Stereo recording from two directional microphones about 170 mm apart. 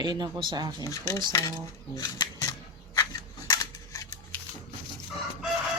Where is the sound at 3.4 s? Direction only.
20° left (ahead or behind).